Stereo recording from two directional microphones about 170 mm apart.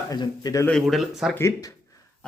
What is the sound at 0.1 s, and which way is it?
Speech, 20° left (ahead or behind).